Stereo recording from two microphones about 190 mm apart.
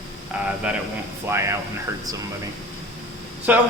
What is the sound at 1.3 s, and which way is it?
Speech, 15° right (ahead or behind).